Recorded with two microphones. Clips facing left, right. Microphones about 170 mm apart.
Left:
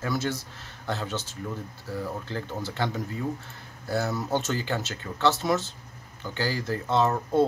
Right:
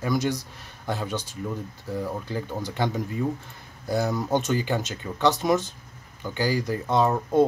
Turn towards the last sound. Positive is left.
turn(degrees=-15)  # may be behind; listen again after turning